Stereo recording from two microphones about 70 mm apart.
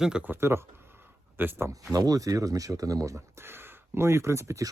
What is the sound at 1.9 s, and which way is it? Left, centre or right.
Speech, right.